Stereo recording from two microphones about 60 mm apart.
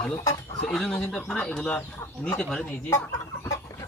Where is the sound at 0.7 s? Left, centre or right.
Centre.